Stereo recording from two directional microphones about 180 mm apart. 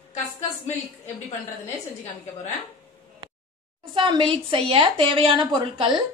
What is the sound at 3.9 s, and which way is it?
A woman's voice, 25° right (ahead or behind).